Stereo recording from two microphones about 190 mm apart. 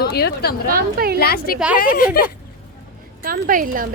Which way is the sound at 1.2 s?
55° left (ahead or behind).